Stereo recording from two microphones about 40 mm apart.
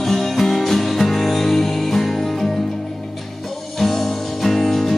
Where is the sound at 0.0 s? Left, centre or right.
Centre.